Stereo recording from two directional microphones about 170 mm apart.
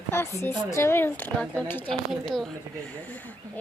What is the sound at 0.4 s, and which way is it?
A woman's voice, 15° left (ahead or behind).